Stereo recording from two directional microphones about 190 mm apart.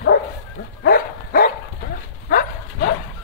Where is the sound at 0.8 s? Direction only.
50° left (ahead or behind).